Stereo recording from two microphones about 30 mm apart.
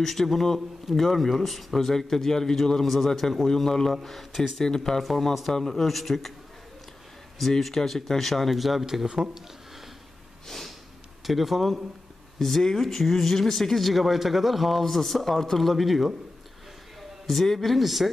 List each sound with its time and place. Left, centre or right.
0.0 s speech: centre
4.6 s speech: centre
5.0 s speech: centre
7.4 s speech: centre
9.0 s speech: right
10.4 s snort: centre
11.2 s speech: centre
12.4 s speech: centre
17.6 s speech: centre